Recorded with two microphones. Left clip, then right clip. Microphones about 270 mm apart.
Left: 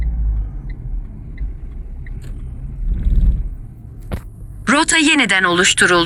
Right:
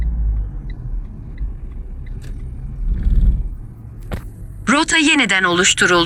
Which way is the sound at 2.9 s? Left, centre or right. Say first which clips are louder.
Even; centre.